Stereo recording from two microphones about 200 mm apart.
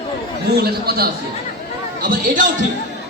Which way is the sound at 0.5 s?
50° right (ahead or behind).